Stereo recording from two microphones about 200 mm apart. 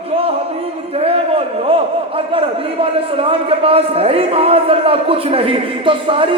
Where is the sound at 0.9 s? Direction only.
30° right (ahead or behind).